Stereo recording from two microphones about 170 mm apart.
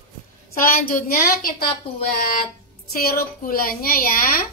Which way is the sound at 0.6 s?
55° left (ahead or behind).